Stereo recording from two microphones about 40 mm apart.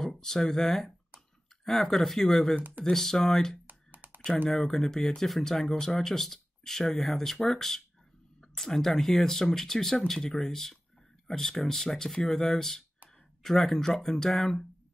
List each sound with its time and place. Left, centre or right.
0.0 s speech: centre
3.6 s computer keyboard: right
4.5 s speech: centre